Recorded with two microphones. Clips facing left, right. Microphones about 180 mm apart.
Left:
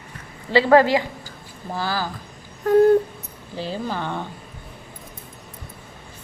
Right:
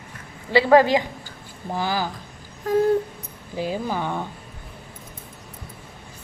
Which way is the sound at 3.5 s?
10° right (ahead or behind).